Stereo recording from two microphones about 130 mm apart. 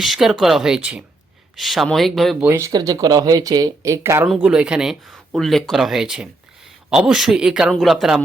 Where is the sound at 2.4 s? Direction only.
15° right (ahead or behind).